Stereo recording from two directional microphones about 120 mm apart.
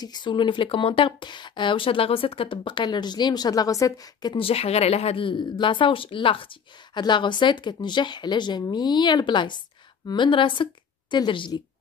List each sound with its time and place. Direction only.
0.0 s speech: 40° left (ahead or behind)
4.5 s a woman's voice: 55° left (ahead or behind); by 11.6 s 40° left (ahead or behind)